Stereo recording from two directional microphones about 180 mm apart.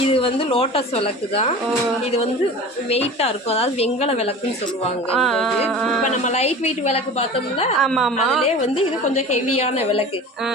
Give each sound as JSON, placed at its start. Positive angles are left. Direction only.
{"t": 0.1, "sound": "a woman's voice", "side_deg": 30}
{"t": 2.9, "sound": "a woman's voice", "side_deg": 35}
{"t": 5.1, "sound": "a woman's voice", "side_deg": 0}
{"t": 6.1, "sound": "a woman's voice", "side_deg": 40}
{"t": 7.8, "sound": "a woman's voice", "side_deg": 0}
{"t": 9.1, "sound": "a woman's voice", "side_deg": 35}